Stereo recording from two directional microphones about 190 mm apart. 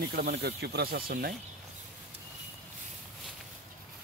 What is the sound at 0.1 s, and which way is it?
Speech, 55° right (ahead or behind).